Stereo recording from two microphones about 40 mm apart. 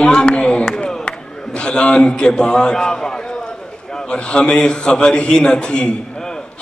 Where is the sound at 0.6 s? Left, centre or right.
Centre.